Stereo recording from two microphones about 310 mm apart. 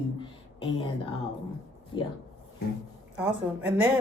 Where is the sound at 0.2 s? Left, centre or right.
Centre.